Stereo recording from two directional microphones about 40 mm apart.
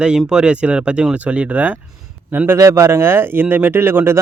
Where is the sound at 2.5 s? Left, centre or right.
Right.